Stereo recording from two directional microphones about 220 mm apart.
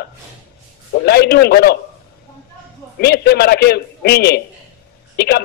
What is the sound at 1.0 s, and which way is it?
Speech, 45° left (ahead or behind).